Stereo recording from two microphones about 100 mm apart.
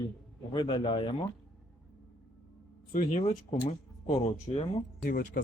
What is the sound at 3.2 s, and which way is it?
Speech, 90° left.